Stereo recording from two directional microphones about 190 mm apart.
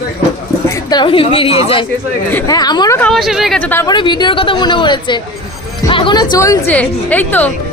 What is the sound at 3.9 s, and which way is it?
A woman's voice, 25° left (ahead or behind).